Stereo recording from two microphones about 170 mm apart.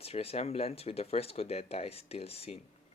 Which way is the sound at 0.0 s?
35° left (ahead or behind).